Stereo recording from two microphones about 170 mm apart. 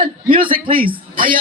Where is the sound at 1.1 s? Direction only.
55° right (ahead or behind).